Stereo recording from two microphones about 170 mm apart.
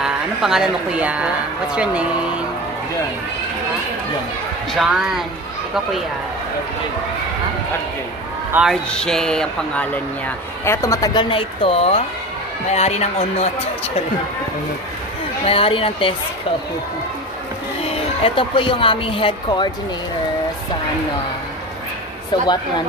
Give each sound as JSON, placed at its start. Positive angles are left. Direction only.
{"t": 0.0, "sound": "speech", "side_deg": -5}
{"t": 4.7, "sound": "speech", "side_deg": 0}
{"t": 8.5, "sound": "speech", "side_deg": -10}
{"t": 8.9, "sound": "speech", "side_deg": 5}
{"t": 15.4, "sound": "speech", "side_deg": 35}
{"t": 17.8, "sound": "a woman's voice", "side_deg": 35}